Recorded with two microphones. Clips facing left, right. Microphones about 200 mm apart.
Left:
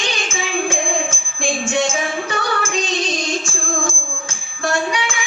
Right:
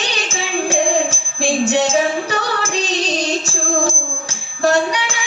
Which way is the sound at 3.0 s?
35° right (ahead or behind).